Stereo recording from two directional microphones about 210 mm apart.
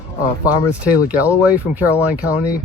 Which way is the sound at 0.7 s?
5° right (ahead or behind).